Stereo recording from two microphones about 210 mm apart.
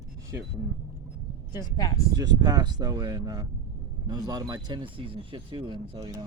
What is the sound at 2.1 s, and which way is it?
Speech, 20° right (ahead or behind).